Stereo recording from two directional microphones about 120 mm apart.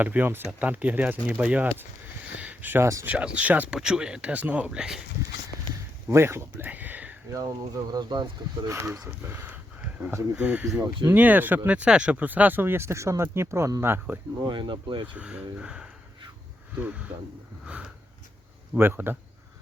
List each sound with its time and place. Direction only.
0.0 s speech: 15° right (ahead or behind)
3.1 s speech: 10° right (ahead or behind)
6.1 s speech: 20° right (ahead or behind)
7.3 s speech: 30° right (ahead or behind)
8.6 s speech: 25° right (ahead or behind)
14.4 s speech: 40° right (ahead or behind)
15.0 s speech: 10° right (ahead or behind)
18.7 s speech: 15° right (ahead or behind)